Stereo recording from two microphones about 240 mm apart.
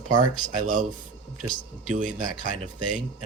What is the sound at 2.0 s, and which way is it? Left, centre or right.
Speech, right.